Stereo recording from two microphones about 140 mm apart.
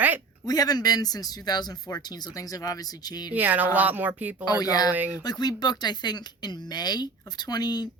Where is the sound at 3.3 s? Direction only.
10° right (ahead or behind).